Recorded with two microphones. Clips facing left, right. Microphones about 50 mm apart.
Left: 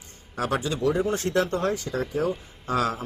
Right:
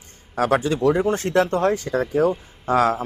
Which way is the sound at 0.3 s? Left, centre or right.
Right.